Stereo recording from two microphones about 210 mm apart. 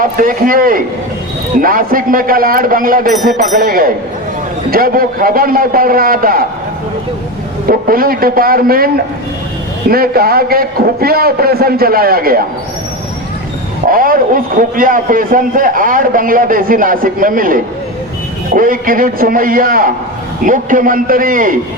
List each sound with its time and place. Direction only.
0.0 s a man's voice: 40° right (ahead or behind)
7.7 s a man's voice: 45° right (ahead or behind)
9.9 s a man's voice: 45° right (ahead or behind)
13.9 s a man's voice: 40° right (ahead or behind)